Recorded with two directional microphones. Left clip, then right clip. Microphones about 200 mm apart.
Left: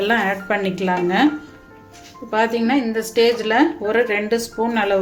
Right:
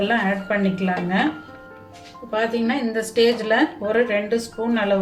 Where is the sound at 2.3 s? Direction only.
50° left (ahead or behind).